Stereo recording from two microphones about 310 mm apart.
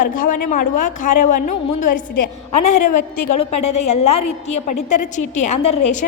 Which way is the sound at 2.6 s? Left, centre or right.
Left.